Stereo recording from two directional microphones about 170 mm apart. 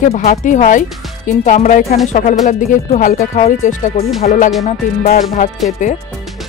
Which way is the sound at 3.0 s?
55° left (ahead or behind).